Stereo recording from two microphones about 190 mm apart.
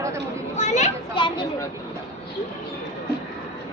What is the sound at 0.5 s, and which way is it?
Speech, 35° left (ahead or behind).